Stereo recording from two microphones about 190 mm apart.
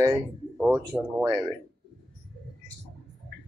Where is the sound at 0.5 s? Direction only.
5° left (ahead or behind).